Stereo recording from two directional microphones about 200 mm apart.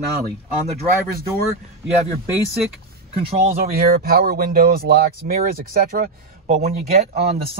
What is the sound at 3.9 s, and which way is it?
Speech, 50° right (ahead or behind).